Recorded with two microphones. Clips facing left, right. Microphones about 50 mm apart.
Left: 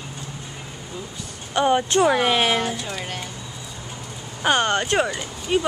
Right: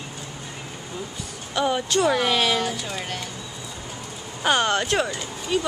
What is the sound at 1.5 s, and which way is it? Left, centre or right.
Speech, left.